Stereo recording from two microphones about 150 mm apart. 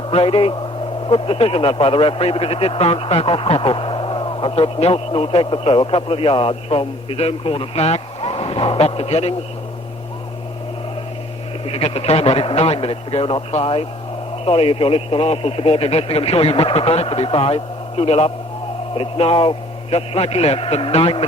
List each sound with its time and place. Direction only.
0.1 s speech: 40° left (ahead or behind)
11.6 s speech: 40° left (ahead or behind)